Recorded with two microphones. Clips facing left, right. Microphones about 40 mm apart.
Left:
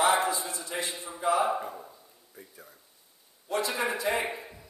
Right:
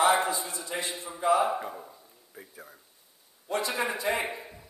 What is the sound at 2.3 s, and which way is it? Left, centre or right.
Speech, centre.